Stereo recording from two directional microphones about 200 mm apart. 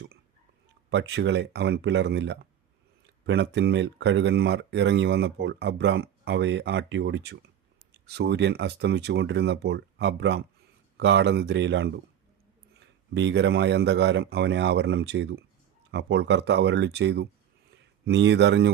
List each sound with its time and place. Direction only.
0.9 s speech: 60° right (ahead or behind)